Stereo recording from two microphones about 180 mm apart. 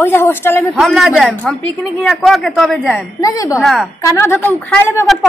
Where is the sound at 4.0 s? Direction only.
15° left (ahead or behind).